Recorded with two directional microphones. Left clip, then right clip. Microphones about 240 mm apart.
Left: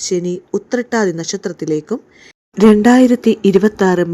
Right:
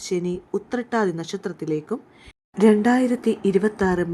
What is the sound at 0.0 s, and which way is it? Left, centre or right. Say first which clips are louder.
Speech: left 7 dB; centre.